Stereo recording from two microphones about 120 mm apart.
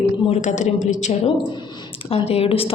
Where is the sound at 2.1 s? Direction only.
55° left (ahead or behind).